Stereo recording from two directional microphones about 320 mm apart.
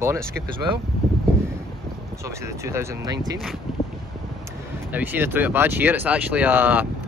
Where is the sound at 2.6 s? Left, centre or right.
Centre.